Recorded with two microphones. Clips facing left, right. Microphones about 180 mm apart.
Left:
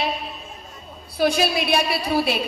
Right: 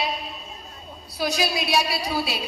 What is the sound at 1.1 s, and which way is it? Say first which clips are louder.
A woman's voice: left 5 dB; 55° left (ahead or behind).